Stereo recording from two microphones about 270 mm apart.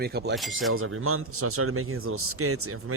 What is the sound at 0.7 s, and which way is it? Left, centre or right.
A man's voice, right.